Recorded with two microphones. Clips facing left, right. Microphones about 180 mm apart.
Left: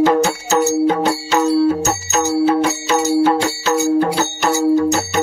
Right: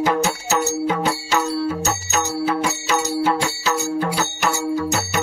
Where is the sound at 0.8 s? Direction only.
35° left (ahead or behind).